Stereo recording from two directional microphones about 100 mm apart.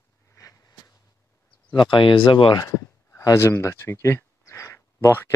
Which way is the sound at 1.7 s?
50° left (ahead or behind).